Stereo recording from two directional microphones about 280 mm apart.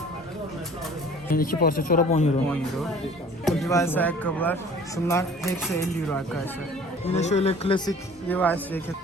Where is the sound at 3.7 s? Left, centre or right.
Centre.